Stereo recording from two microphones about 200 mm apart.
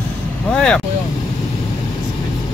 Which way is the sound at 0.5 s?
5° left (ahead or behind).